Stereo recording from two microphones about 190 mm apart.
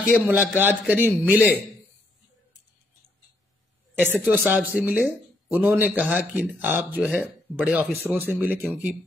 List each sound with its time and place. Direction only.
0.1 s a man's voice: 10° right (ahead or behind)
1.0 s a man's voice: 5° left (ahead or behind)
4.0 s a man's voice: 10° right (ahead or behind)